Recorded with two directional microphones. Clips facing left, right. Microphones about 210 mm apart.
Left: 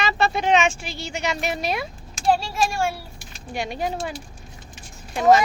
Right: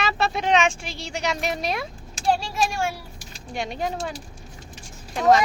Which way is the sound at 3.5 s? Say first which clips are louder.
Left 1 dB; 5° left (ahead or behind).